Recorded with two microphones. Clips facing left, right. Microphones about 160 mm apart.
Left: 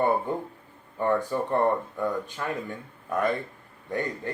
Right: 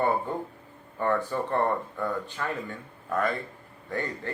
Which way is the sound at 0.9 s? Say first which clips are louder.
Left 2 dB; 15° left (ahead or behind).